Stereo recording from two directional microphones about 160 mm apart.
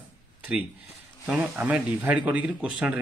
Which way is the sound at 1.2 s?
10° right (ahead or behind).